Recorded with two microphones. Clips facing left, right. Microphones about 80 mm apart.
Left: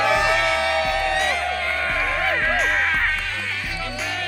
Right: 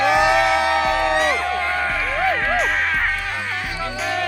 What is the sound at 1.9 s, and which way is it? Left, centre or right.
Music, centre.